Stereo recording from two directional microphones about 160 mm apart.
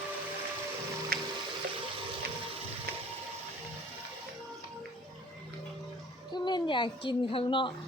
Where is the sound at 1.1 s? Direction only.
70° right (ahead or behind).